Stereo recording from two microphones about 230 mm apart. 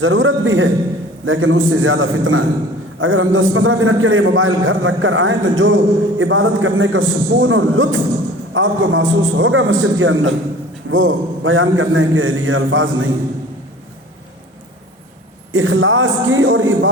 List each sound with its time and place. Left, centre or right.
0.0 s a man's voice: right
15.5 s a man's voice: right